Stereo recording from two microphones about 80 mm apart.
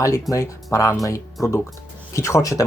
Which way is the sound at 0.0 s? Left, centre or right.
Left.